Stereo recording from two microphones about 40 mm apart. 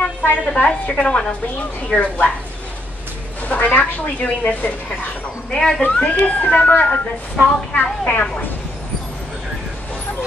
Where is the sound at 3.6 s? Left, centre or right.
Left.